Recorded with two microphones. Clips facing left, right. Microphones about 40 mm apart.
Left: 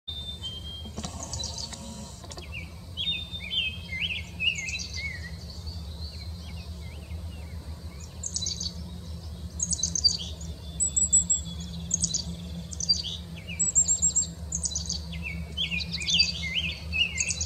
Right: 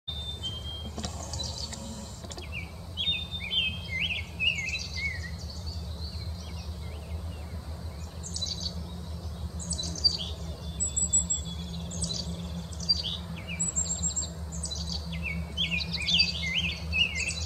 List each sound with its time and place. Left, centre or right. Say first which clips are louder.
1.2 s a sound: even; centre
2.5 s chirp: even; centre
4.2 s bird vocalization: even; centre
8.2 s chirp: left 1 dB; centre
9.6 s bird: left 2 dB; centre
11.9 s bird: left 2 dB; centre
12.3 s chirp: right 1 dB; centre
12.7 s chirp: left 1 dB; centre
13.6 s bird: left 3 dB; centre
15.0 s chirp: right 2 dB; centre
16.4 s chirp: even; centre